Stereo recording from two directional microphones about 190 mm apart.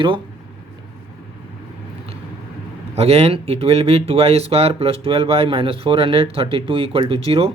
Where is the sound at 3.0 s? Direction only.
30° right (ahead or behind).